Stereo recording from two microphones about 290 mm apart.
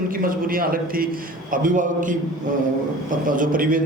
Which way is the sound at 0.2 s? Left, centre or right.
Right.